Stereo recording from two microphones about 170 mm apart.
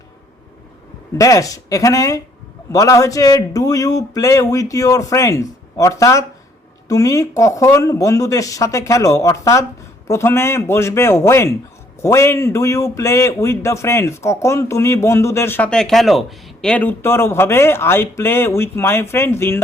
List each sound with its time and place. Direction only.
1.2 s a man's voice: 20° left (ahead or behind)